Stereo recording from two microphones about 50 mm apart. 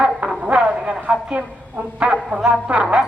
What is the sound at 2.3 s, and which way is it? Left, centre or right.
Speech, centre.